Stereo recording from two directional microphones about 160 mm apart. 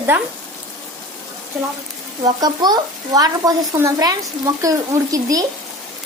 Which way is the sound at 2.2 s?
25° right (ahead or behind).